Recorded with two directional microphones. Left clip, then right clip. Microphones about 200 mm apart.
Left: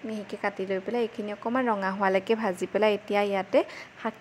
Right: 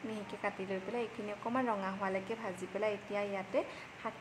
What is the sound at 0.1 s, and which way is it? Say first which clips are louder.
Speech: left 9 dB; 30° left (ahead or behind).